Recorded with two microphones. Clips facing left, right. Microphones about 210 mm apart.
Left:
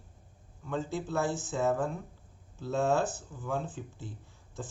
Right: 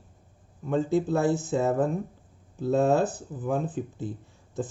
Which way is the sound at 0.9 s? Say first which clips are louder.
Right 8 dB; 60° right (ahead or behind).